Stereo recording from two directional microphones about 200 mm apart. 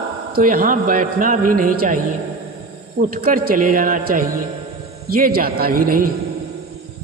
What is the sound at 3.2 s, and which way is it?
A man's voice, 45° right (ahead or behind).